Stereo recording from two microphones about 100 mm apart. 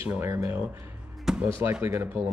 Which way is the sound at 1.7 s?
20° right (ahead or behind).